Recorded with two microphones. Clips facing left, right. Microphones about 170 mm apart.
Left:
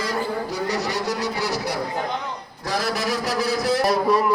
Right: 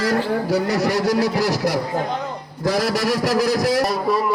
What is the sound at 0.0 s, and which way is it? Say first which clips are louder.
Speech: right 5 dB; 85° right.